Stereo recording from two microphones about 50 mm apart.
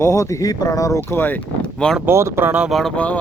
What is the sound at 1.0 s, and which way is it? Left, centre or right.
Speech, left.